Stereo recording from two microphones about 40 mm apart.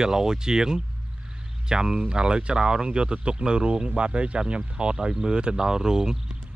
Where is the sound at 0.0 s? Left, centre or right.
Centre.